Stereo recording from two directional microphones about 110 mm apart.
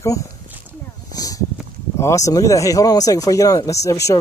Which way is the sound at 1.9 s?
25° left (ahead or behind).